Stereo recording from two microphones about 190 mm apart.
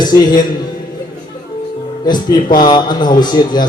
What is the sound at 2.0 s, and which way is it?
Speech, 20° left (ahead or behind).